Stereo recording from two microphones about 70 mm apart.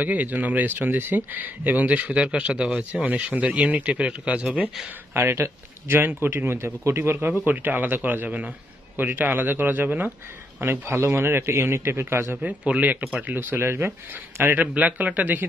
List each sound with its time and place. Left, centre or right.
0.0 s a man's voice: right
5.1 s a man's voice: right
10.6 s a man's voice: right
12.4 s speech: centre
14.6 s speech: centre